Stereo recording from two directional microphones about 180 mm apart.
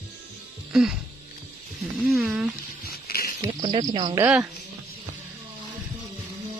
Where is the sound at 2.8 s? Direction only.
55° left (ahead or behind).